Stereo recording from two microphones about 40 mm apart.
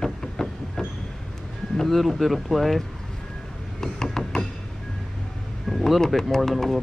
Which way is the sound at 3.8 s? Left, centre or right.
Centre.